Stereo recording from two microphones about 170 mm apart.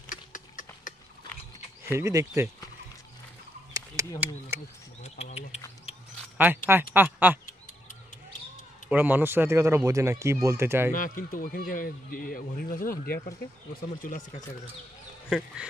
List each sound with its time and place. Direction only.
0.0 s clip-clop: 50° left (ahead or behind)
1.9 s speech: 15° right (ahead or behind)
3.7 s a sound: 20° right (ahead or behind)
5.0 s speech: 40° left (ahead or behind)
6.3 s speech: 10° right (ahead or behind)
7.4 s basketball bounce: 50° left (ahead or behind)
8.9 s speech: 10° right (ahead or behind)
10.9 s a man's voice: 55° left (ahead or behind)
15.2 s speech: 5° right (ahead or behind)